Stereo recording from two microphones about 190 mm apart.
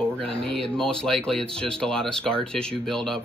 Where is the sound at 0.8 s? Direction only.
5° left (ahead or behind).